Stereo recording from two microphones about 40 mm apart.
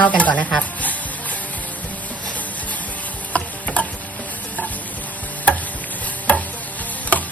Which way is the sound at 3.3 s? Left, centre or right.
Left.